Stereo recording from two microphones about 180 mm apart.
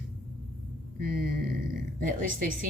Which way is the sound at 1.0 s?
55° right (ahead or behind).